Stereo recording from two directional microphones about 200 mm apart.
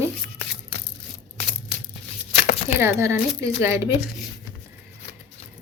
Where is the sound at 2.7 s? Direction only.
10° right (ahead or behind).